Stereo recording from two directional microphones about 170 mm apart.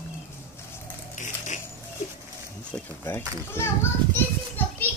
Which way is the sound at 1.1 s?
45° left (ahead or behind).